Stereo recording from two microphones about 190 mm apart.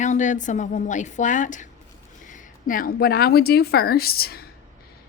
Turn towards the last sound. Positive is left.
turn(degrees=55)  # may be behind; listen again after turning